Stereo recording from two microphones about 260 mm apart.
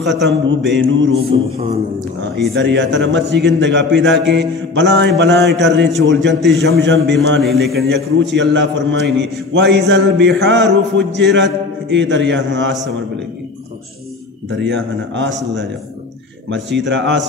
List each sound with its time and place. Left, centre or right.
0.0 s a man's voice: right
1.3 s mantra: right
2.5 s a man's voice: right
7.4 s a man's voice: centre
7.9 s a man's voice: right
14.6 s a man's voice: right
16.4 s a man's voice: right